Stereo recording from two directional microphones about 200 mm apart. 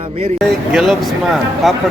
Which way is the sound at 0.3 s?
Centre (ahead or behind).